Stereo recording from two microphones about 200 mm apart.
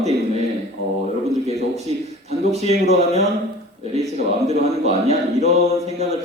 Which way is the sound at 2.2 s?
30° right (ahead or behind).